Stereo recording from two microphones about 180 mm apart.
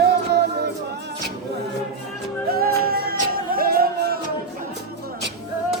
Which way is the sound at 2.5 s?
55° right (ahead or behind).